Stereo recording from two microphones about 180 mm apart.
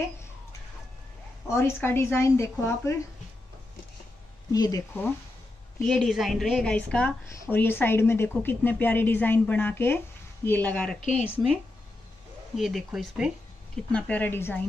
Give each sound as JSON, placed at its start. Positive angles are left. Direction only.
{"t": 1.5, "sound": "a woman's voice", "side_deg": 15}
{"t": 4.5, "sound": "speech", "side_deg": 20}
{"t": 5.9, "sound": "a woman's voice", "side_deg": 0}
{"t": 12.5, "sound": "a woman's voice", "side_deg": 0}